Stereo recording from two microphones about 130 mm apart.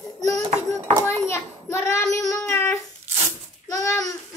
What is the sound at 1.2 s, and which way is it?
A child's voice, 20° left (ahead or behind).